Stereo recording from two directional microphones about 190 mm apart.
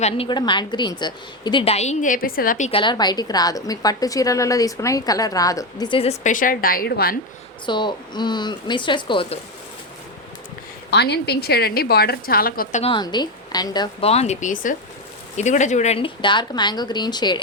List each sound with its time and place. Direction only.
0.0 s a woman's voice: 25° left (ahead or behind); by 2.6 s 50° left (ahead or behind)
2.6 s a woman's voice: 25° left (ahead or behind); by 7.2 s 55° left (ahead or behind)
7.7 s a woman's voice: 25° left (ahead or behind)
10.9 s a woman's voice: 60° left (ahead or behind)
12.8 s a woman's voice: 25° left (ahead or behind)